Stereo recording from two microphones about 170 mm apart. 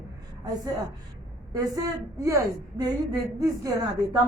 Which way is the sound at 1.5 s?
20° right (ahead or behind).